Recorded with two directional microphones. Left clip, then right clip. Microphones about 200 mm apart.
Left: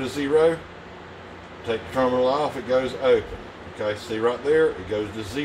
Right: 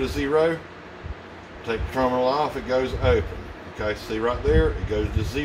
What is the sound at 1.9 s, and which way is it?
A man's voice, 25° right (ahead or behind).